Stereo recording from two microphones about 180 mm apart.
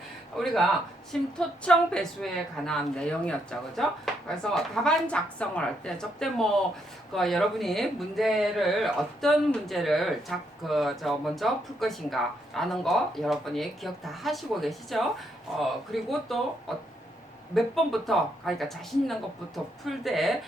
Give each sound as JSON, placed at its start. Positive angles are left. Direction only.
{"t": 0.4, "sound": "speech", "side_deg": 0}